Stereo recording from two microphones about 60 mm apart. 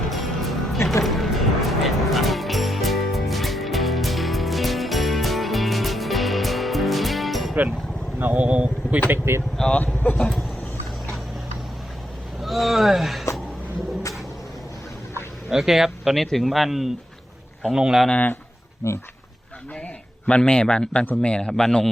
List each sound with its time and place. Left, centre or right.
0.1 s music: centre
8.2 s speech: right
9.0 s speech: right
9.7 s speech: left
12.4 s speech: centre
15.4 s speech: centre
18.1 s speech: left
18.8 s speech: left
20.2 s a man's voice: centre